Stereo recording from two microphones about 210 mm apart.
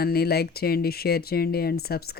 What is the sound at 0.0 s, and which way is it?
Speech, 45° left (ahead or behind).